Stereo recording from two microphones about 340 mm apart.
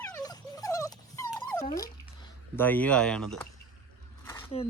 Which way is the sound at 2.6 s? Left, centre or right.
Centre.